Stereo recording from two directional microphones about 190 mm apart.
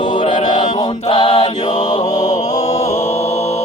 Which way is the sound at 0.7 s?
20° left (ahead or behind).